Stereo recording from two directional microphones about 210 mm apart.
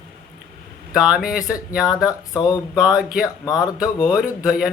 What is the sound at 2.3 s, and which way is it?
Speech, 20° left (ahead or behind).